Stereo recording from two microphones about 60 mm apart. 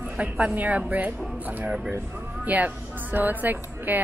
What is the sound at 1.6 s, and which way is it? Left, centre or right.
Speech, centre.